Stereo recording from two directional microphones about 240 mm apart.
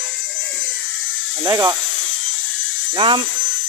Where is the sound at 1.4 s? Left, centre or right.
Centre.